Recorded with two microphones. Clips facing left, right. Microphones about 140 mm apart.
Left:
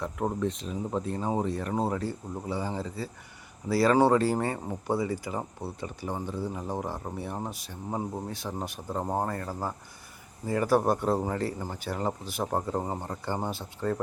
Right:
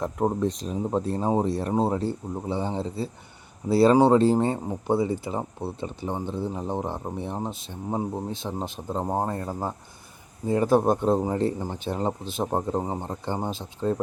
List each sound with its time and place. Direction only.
0.0 s speech: 35° right (ahead or behind); by 14.0 s 20° right (ahead or behind)